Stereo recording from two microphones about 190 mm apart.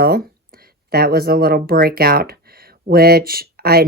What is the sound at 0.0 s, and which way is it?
Speech, 50° right (ahead or behind).